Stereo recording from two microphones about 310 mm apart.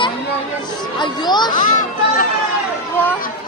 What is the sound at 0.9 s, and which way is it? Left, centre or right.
Speech, centre.